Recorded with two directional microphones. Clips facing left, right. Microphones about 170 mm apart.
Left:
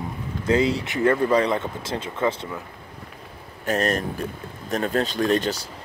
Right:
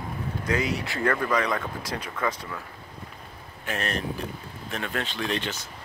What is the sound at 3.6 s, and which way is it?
Speech, 40° left (ahead or behind).